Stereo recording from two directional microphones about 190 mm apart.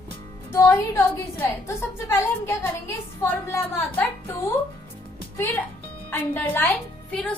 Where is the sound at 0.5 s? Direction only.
10° left (ahead or behind).